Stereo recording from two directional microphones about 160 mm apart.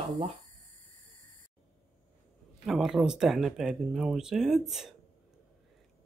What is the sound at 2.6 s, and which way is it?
Speech, centre (ahead or behind).